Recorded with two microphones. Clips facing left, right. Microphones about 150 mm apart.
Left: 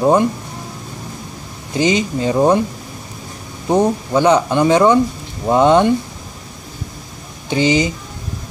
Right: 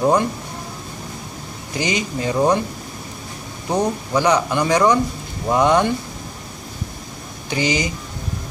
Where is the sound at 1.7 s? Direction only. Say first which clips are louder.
Left 6 dB; 20° left (ahead or behind).